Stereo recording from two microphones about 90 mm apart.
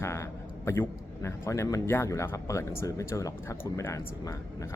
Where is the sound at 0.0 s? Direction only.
30° left (ahead or behind).